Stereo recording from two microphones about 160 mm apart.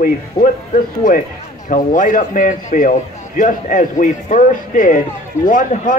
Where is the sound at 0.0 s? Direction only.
55° left (ahead or behind).